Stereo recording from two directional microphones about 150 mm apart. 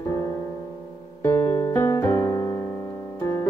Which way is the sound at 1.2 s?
15° left (ahead or behind).